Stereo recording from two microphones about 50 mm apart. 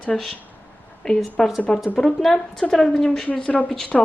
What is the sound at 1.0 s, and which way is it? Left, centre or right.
A woman's voice, centre.